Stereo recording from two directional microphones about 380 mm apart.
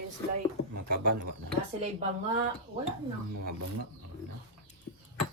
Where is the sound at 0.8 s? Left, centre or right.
Right.